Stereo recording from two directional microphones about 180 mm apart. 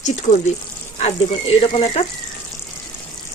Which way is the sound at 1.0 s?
35° left (ahead or behind).